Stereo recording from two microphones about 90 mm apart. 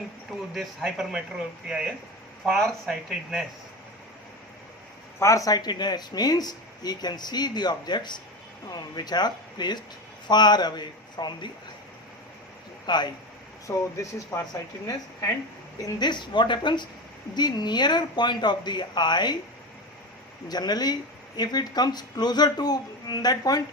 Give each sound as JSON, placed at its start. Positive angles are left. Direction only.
{"t": 0.5, "sound": "speech", "side_deg": 0}
{"t": 5.2, "sound": "speech", "side_deg": 40}
{"t": 12.8, "sound": "speech", "side_deg": 55}
{"t": 13.7, "sound": "speech", "side_deg": 35}
{"t": 16.0, "sound": "speech", "side_deg": 60}
{"t": 20.5, "sound": "speech", "side_deg": 50}